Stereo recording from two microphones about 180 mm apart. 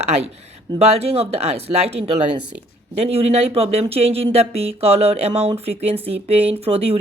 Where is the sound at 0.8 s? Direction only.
35° right (ahead or behind).